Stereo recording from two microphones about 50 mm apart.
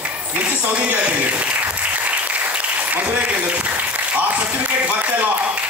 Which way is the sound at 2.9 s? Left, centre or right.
Right.